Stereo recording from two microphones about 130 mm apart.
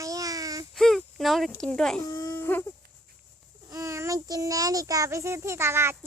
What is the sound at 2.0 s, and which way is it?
Speech, 30° left (ahead or behind).